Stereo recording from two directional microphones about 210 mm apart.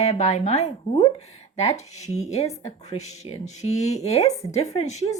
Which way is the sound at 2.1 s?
30° left (ahead or behind).